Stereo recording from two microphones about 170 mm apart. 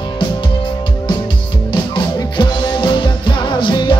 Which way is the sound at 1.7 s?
25° left (ahead or behind).